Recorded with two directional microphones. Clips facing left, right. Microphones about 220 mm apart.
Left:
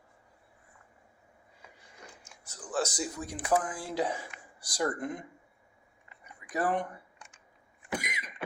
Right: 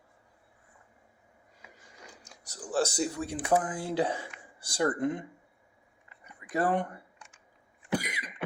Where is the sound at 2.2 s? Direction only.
40° right (ahead or behind).